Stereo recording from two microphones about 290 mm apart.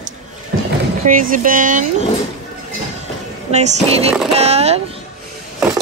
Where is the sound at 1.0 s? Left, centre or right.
Right.